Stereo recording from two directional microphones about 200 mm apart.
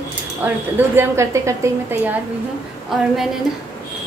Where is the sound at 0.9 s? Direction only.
15° right (ahead or behind).